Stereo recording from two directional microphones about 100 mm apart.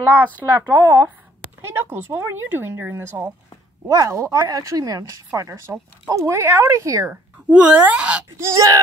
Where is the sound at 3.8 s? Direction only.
35° right (ahead or behind).